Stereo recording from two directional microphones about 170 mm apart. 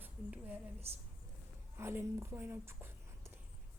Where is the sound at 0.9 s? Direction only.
35° right (ahead or behind).